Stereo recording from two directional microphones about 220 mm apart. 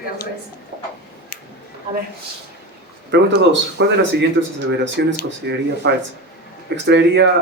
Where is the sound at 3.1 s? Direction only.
50° right (ahead or behind).